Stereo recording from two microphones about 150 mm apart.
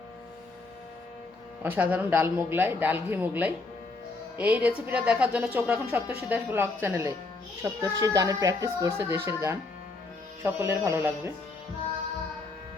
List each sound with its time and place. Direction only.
1.6 s a woman's voice: 10° right (ahead or behind)